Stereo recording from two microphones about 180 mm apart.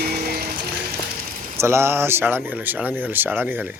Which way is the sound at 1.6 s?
15° right (ahead or behind).